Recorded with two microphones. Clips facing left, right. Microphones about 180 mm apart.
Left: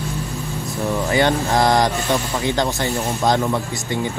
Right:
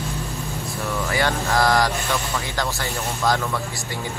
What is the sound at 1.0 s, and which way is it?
Speech, 20° left (ahead or behind).